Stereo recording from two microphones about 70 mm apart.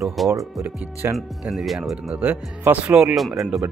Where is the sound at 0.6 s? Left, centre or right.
Right.